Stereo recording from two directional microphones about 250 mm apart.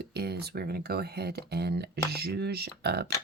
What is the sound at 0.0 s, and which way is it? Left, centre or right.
Speech, right.